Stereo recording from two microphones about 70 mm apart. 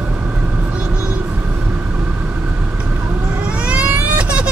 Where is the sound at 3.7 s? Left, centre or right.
Centre.